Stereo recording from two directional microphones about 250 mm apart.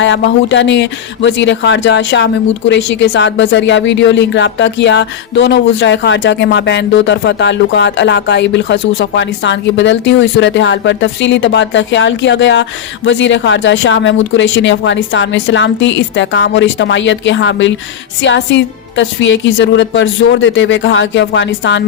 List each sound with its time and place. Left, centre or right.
0.0 s speech: left